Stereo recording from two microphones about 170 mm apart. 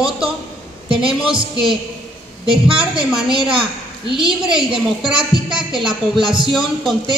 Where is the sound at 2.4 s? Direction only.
30° right (ahead or behind).